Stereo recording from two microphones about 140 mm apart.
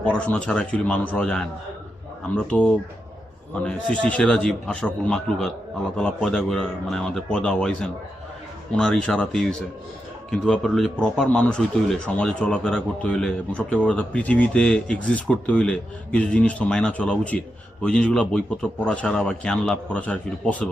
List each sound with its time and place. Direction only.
0.0 s speech: 10° left (ahead or behind)